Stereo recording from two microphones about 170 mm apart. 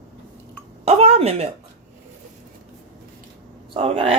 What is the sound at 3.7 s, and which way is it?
Speech, 35° right (ahead or behind).